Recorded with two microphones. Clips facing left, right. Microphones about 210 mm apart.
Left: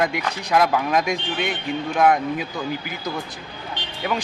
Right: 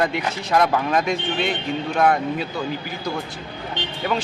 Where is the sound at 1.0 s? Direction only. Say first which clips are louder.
Right 2 dB; 15° left (ahead or behind).